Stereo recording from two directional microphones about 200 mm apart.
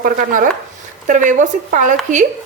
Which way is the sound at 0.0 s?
45° right (ahead or behind).